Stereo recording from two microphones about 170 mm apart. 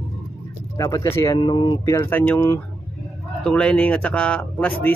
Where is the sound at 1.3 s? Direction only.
30° left (ahead or behind).